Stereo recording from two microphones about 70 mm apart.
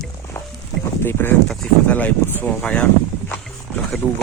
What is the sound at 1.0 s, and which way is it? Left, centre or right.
Speech, left.